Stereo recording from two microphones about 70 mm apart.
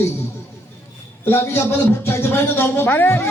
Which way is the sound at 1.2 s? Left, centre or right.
Left.